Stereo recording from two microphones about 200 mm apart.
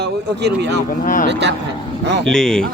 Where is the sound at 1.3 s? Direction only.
60° right (ahead or behind).